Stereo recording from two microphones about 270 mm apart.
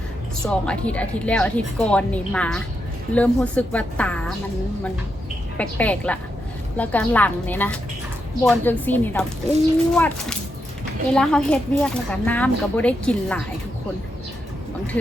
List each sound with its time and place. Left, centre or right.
0.4 s a woman's voice: centre
5.5 s a woman's voice: centre
9.5 s speech: right
9.9 s a woman's voice: centre